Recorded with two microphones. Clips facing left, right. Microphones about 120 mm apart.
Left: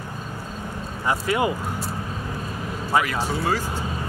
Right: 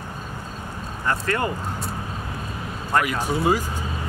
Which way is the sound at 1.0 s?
10° left (ahead or behind).